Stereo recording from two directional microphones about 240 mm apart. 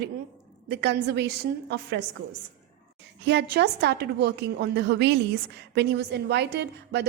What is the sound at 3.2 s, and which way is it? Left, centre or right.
A woman's voice, right.